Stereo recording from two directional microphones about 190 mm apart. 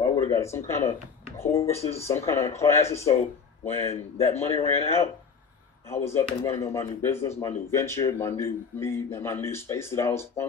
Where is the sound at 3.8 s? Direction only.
35° left (ahead or behind).